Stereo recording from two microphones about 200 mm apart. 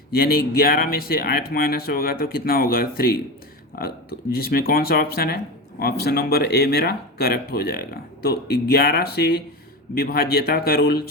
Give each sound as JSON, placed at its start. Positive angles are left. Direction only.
{"t": 0.1, "sound": "speech", "side_deg": 50}
{"t": 4.4, "sound": "speech", "side_deg": 50}